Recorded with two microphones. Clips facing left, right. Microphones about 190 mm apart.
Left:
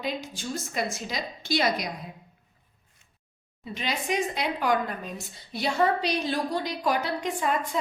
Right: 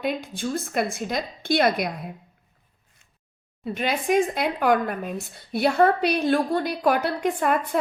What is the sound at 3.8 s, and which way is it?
Speech, 55° right (ahead or behind).